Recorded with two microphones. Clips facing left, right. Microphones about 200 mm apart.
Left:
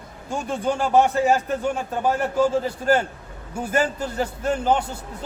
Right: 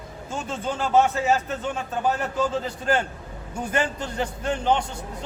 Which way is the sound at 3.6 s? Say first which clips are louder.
Left 3 dB; 5° left (ahead or behind).